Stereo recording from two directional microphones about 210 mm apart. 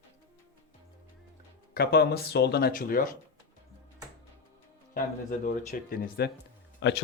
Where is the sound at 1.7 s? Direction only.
50° left (ahead or behind).